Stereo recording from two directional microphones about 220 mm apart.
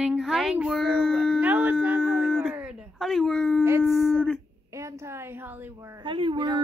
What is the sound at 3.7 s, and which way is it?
A woman's voice, 15° right (ahead or behind).